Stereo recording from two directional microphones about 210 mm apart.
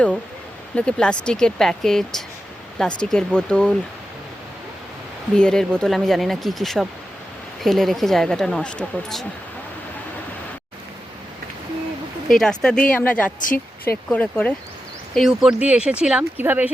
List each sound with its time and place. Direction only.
0.8 s speech: 5° left (ahead or behind)
5.4 s speech: 5° left (ahead or behind)
12.3 s speech: 5° left (ahead or behind)
13.4 s speech: 40° left (ahead or behind)
13.9 s speech: 5° left (ahead or behind)